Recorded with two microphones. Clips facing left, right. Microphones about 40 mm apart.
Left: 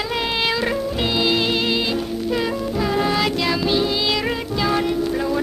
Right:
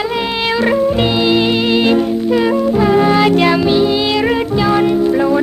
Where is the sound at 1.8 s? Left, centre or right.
Right.